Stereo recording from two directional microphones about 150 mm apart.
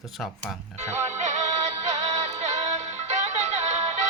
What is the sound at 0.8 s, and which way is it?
Music, 50° right (ahead or behind).